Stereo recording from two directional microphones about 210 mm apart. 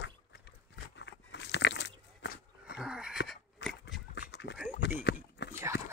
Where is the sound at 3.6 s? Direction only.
60° left (ahead or behind).